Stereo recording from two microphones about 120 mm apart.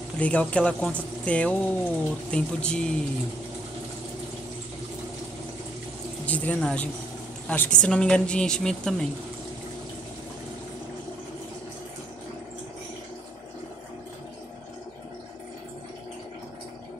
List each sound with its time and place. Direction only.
0.2 s speech: 10° left (ahead or behind)
6.2 s a woman's voice: 10° left (ahead or behind)